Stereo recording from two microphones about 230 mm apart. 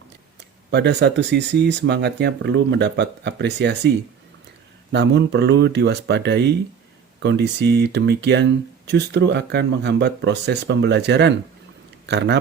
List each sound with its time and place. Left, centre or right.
0.3 s speech: right
4.9 s speech: right